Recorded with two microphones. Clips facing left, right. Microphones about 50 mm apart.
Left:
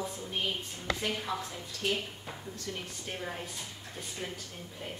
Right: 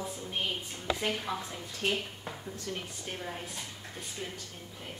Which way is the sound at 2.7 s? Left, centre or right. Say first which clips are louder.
Even; centre.